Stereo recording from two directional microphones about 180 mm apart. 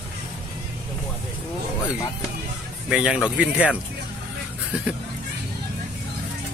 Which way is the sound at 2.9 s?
5° right (ahead or behind).